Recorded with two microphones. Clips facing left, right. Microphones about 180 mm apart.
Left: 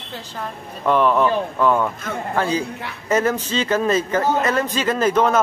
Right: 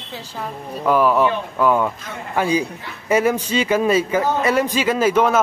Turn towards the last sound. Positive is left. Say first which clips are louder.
# right 1 dB
turn(degrees=-10)  # may be behind; listen again after turning